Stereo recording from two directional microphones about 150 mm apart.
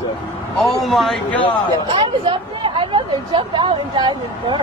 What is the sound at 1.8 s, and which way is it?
Speech, 35° right (ahead or behind).